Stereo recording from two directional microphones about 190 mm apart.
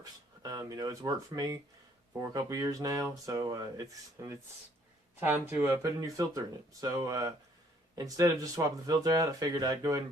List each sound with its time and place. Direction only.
0.0 s speech: 20° right (ahead or behind)